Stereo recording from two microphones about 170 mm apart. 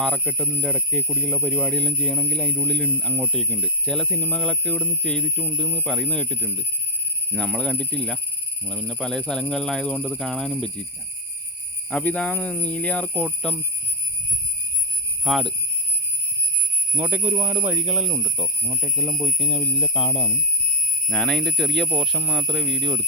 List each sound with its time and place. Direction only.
0.0 s speech: 5° left (ahead or behind)
11.9 s speech: 5° left (ahead or behind)
15.2 s speech: centre (ahead or behind)
16.9 s speech: 10° right (ahead or behind)
18.8 s speech: 15° left (ahead or behind)
19.4 s speech: 30° left (ahead or behind)
21.1 s speech: 5° left (ahead or behind)